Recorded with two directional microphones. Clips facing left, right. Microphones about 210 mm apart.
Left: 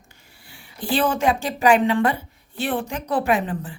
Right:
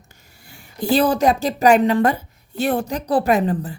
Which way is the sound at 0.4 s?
45° right (ahead or behind).